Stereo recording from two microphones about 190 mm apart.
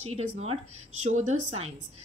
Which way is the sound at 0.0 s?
35° right (ahead or behind).